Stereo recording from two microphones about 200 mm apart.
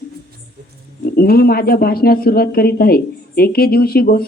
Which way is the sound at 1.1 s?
50° left (ahead or behind).